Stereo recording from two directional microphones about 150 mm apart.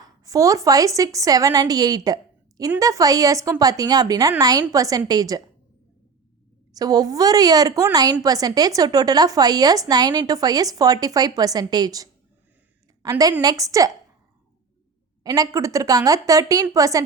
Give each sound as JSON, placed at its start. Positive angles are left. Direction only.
{"t": 0.0, "sound": "a woman's voice", "side_deg": -25}
{"t": 6.7, "sound": "a woman's voice", "side_deg": -25}
{"t": 15.2, "sound": "a woman's voice", "side_deg": -25}